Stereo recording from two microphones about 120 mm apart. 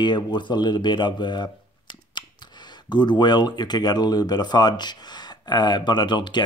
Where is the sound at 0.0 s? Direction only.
40° left (ahead or behind).